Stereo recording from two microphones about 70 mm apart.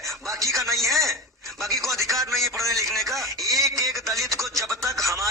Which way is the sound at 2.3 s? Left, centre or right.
Centre.